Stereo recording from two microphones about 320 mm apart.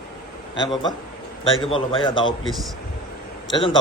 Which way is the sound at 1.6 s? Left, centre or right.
Centre.